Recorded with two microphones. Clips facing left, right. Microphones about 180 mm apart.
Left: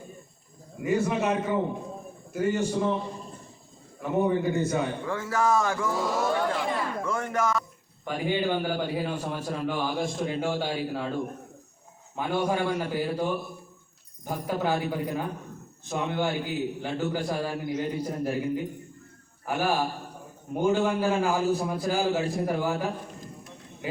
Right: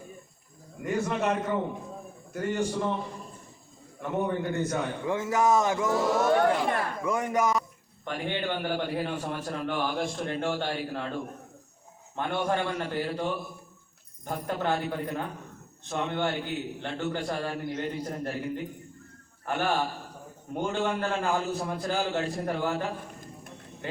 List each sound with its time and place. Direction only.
0.8 s a man's voice: 5° left (ahead or behind)
4.0 s a man's voice: 5° left (ahead or behind)
5.0 s speech: 20° right (ahead or behind)
6.4 s speech: 60° right (ahead or behind)
7.0 s speech: 15° right (ahead or behind)
8.0 s a man's voice: 5° left (ahead or behind)
12.1 s a man's voice: 5° left (ahead or behind)
14.3 s a man's voice: 5° left (ahead or behind)